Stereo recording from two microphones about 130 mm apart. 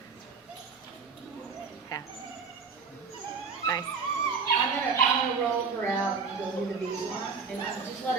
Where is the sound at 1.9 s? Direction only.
30° left (ahead or behind).